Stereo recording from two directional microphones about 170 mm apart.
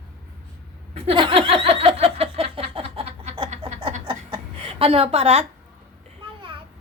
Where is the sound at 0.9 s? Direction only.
35° right (ahead or behind).